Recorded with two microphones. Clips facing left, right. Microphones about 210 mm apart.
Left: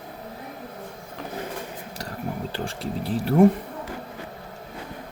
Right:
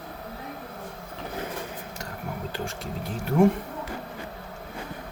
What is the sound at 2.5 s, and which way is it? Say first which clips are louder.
Speech: left 3 dB; 30° left (ahead or behind).